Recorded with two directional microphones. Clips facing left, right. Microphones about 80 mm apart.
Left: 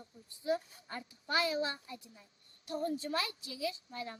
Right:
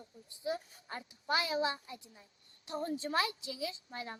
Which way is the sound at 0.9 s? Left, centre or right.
Right.